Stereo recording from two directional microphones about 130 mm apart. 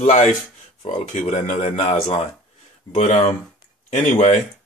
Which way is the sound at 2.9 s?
60° left (ahead or behind).